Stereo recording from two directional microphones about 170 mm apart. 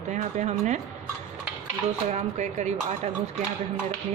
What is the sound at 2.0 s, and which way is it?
Speech, 45° right (ahead or behind).